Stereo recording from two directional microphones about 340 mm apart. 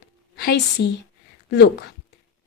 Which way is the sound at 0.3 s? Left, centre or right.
Left.